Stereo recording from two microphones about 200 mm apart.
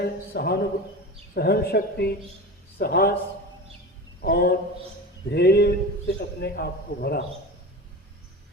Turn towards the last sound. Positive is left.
turn(degrees=55)  # may be behind; listen again after turning